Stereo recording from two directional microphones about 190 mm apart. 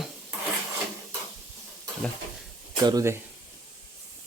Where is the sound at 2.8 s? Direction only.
15° right (ahead or behind).